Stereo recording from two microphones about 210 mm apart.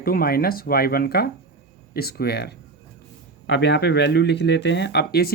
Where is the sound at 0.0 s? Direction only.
45° left (ahead or behind).